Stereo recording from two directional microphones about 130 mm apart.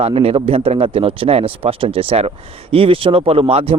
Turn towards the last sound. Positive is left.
turn(degrees=-45)  # may be behind; listen again after turning